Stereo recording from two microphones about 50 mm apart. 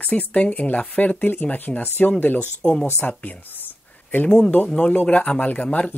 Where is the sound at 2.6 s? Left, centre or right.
Centre.